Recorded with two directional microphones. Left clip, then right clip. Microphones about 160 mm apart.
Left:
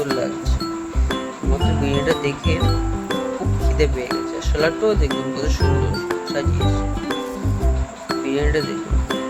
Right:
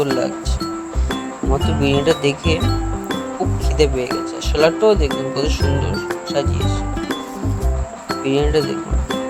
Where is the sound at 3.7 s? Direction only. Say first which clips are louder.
Right 4 dB; 20° right (ahead or behind).